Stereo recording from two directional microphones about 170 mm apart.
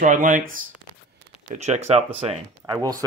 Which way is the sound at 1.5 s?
40° right (ahead or behind).